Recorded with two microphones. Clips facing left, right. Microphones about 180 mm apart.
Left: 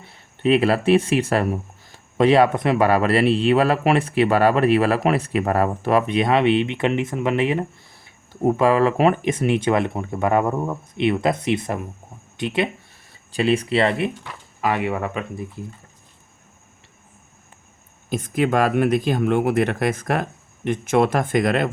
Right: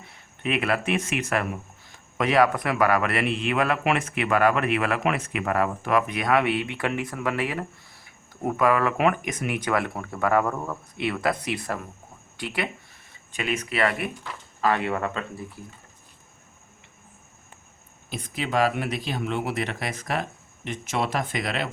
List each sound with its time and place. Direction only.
0.0 s a man's voice: 30° left (ahead or behind)
14.3 s speech: 15° left (ahead or behind)
18.1 s speech: 50° left (ahead or behind)